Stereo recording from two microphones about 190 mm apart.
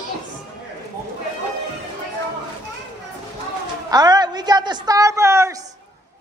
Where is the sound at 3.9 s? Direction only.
20° right (ahead or behind).